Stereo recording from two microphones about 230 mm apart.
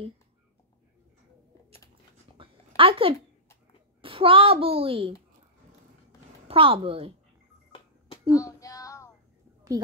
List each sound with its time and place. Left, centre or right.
2.3 s a sound: right
4.0 s a child's voice: right
6.4 s a child's voice: right
8.3 s child singing: centre